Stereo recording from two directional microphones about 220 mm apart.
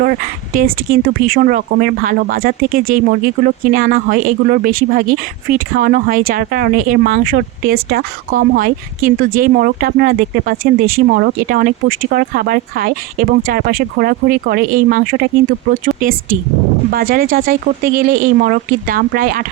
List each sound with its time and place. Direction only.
0.0 s speech: 40° right (ahead or behind)
5.7 s speech: 40° right (ahead or behind)
10.6 s speech: 70° right (ahead or behind)
11.1 s speech: 45° right (ahead or behind)
16.9 s speech: 40° right (ahead or behind)